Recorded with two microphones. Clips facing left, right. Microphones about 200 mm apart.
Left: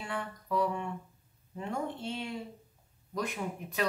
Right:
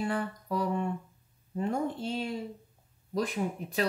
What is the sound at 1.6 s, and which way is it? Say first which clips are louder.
Speech: right 5 dB; 35° right (ahead or behind).